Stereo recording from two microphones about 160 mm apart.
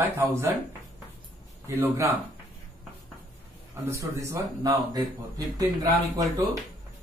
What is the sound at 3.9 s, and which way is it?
Speech, 15° right (ahead or behind).